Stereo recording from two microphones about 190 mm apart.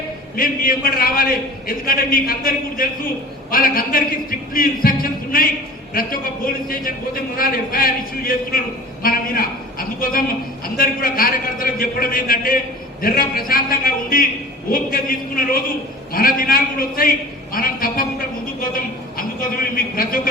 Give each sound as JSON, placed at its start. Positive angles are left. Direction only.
{"t": 0.3, "sound": "a man's voice", "side_deg": 50}
{"t": 9.0, "sound": "a sound", "side_deg": 50}
{"t": 10.8, "sound": "a man's voice", "side_deg": 50}